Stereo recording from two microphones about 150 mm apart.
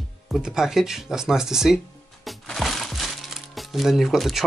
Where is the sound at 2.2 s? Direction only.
Centre (ahead or behind).